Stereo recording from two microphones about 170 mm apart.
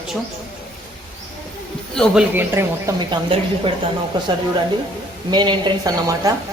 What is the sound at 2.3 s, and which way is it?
Speech, 15° right (ahead or behind).